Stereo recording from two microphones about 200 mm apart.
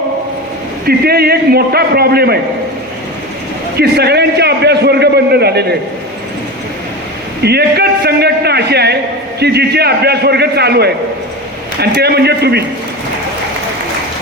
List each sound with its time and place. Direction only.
0.9 s a man's voice: 50° right (ahead or behind)
3.8 s a man's voice: 55° right (ahead or behind)
7.4 s a man's voice: 55° right (ahead or behind)